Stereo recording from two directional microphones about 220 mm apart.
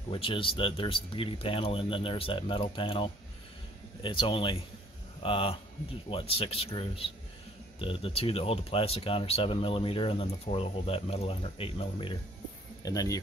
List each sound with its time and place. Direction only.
0.1 s speech: 25° left (ahead or behind)